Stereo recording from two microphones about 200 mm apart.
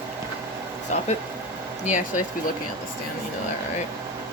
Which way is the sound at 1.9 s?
40° left (ahead or behind).